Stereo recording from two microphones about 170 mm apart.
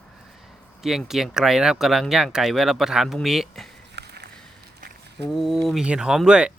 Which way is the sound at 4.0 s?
75° right (ahead or behind).